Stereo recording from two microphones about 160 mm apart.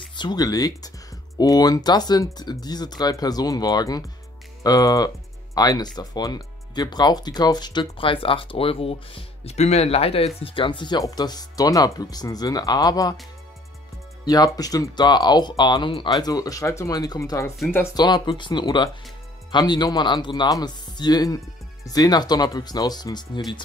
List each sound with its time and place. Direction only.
0.1 s speech: 30° left (ahead or behind)
14.2 s speech: 25° left (ahead or behind)